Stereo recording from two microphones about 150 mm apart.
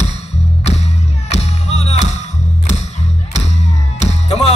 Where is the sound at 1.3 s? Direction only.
45° left (ahead or behind).